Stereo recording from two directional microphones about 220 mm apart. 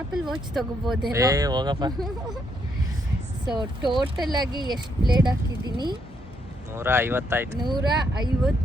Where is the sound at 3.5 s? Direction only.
20° right (ahead or behind).